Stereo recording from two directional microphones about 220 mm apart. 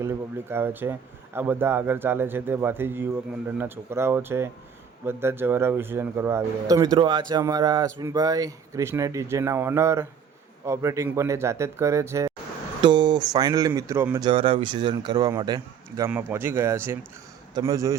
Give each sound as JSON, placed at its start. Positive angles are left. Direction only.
{"t": 0.0, "sound": "speech", "side_deg": -10}
{"t": 14.3, "sound": "a man's voice", "side_deg": -25}